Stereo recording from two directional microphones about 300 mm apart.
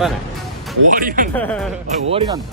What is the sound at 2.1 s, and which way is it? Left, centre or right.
Speech, centre.